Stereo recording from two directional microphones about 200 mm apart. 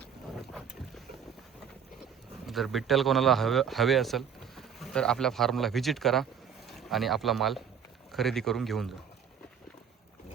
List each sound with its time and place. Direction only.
2.5 s speech: centre (ahead or behind)